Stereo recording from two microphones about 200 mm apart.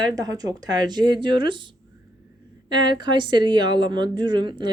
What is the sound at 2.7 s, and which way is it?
Speech, 25° right (ahead or behind).